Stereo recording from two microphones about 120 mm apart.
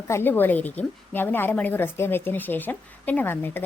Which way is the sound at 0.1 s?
20° left (ahead or behind).